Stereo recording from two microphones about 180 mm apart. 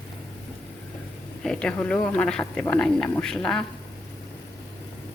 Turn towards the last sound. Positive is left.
turn(degrees=5)  # may be behind; listen again after turning